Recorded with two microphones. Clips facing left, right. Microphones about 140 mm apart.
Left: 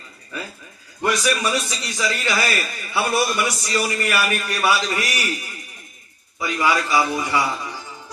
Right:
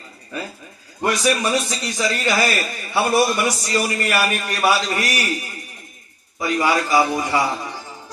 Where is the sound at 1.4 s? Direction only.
25° right (ahead or behind).